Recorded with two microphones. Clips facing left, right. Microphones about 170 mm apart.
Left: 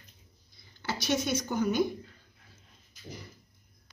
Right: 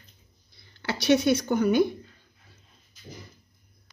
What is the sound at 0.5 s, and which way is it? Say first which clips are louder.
Speech: right 3 dB; 65° right (ahead or behind).